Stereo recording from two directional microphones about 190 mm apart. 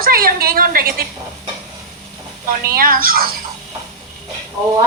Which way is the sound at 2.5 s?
50° right (ahead or behind).